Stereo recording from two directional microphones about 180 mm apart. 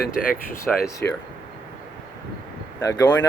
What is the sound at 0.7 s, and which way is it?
Speech, 5° left (ahead or behind).